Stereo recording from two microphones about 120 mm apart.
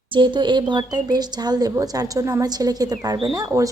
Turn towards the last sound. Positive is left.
turn(degrees=-30)  # may be behind; listen again after turning